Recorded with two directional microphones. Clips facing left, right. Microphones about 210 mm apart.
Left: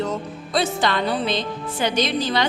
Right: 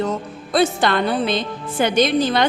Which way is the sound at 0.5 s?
55° right (ahead or behind).